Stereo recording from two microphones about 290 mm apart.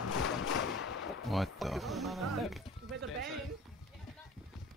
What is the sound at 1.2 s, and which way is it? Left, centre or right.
Speech, centre.